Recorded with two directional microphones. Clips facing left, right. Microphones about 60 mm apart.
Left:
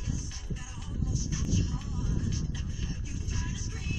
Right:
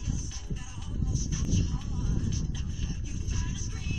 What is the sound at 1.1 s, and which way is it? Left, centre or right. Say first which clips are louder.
Music: even; left.